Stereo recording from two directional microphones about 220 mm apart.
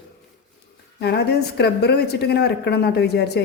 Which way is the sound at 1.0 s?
50° left (ahead or behind).